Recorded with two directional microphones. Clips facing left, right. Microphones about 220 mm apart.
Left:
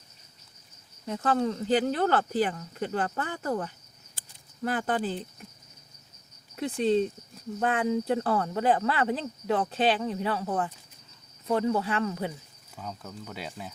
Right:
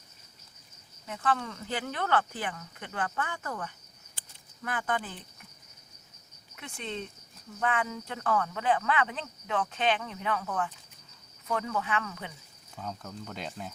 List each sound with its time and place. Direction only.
1.0 s speech: 35° left (ahead or behind)
6.6 s speech: 35° left (ahead or behind)
12.7 s speech: 5° left (ahead or behind)